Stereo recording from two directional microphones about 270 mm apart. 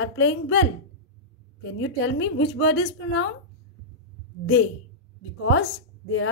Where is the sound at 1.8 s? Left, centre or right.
Left.